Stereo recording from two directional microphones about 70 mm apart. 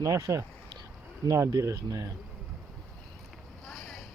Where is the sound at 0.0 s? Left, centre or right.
Right.